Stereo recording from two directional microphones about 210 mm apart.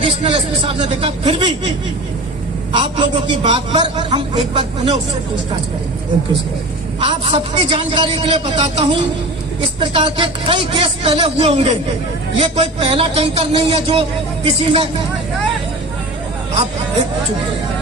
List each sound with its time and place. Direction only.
0.0 s a man's voice: 25° right (ahead or behind)
2.7 s a man's voice: 25° right (ahead or behind)
7.0 s a man's voice: 25° right (ahead or behind)